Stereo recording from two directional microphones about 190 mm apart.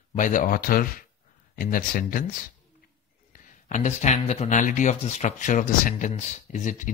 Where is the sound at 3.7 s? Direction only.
40° left (ahead or behind).